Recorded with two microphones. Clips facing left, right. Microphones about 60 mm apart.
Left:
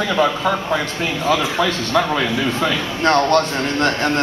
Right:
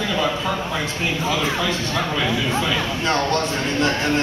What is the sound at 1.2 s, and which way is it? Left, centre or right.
A man's voice, left.